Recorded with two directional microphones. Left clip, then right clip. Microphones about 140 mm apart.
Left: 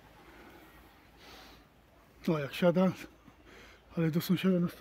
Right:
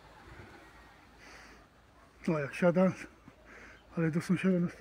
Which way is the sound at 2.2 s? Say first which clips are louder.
Even; 15° left (ahead or behind).